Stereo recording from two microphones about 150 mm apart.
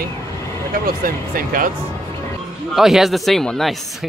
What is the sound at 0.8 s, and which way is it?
Speech, 70° right (ahead or behind).